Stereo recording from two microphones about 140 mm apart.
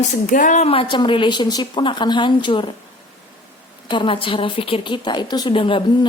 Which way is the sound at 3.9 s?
35° left (ahead or behind).